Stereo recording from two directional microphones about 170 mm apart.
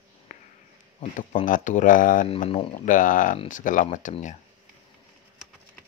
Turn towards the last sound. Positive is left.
turn(degrees=45)  # may be behind; listen again after turning